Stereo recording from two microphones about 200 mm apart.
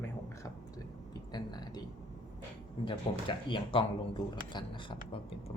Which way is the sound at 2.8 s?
25° left (ahead or behind).